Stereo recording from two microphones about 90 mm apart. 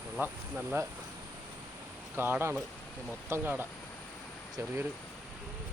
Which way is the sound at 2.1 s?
25° right (ahead or behind).